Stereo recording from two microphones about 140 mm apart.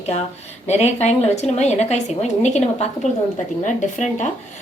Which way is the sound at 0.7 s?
50° left (ahead or behind).